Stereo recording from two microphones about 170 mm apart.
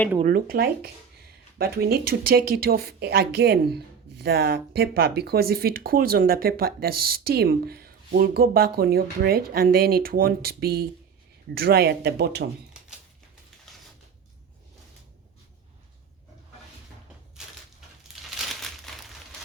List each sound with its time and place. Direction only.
0.3 s speech: 60° right (ahead or behind); by 12.5 s 75° right (ahead or behind)
13.7 s a sound: centre (ahead or behind)
18.3 s crumpling: centre (ahead or behind)